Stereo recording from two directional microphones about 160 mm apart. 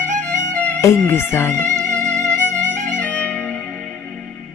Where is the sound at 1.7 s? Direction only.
5° left (ahead or behind).